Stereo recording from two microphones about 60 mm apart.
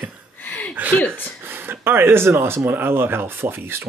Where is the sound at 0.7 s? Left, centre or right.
Right.